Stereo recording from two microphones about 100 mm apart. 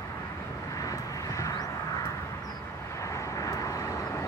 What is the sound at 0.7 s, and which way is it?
Vehicle, 35° left (ahead or behind).